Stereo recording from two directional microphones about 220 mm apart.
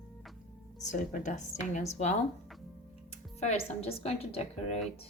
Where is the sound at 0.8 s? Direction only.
35° left (ahead or behind).